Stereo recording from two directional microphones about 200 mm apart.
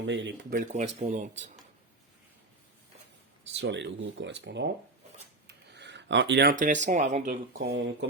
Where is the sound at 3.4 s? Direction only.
60° right (ahead or behind); by 7.3 s 35° right (ahead or behind).